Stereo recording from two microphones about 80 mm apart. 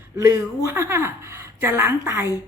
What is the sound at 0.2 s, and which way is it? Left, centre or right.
A woman's voice, right.